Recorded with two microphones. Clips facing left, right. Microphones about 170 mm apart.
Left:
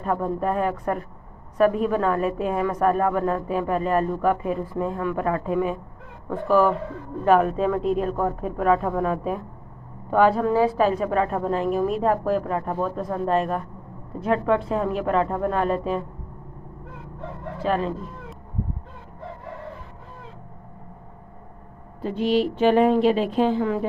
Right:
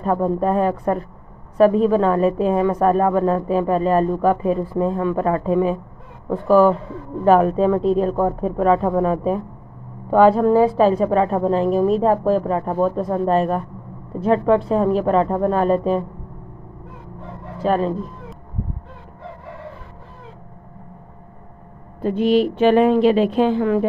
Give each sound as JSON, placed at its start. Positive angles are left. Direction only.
{"t": 0.0, "sound": "a woman's voice", "side_deg": -35}
{"t": 17.6, "sound": "a woman's voice", "side_deg": -40}
{"t": 22.0, "sound": "a woman's voice", "side_deg": -55}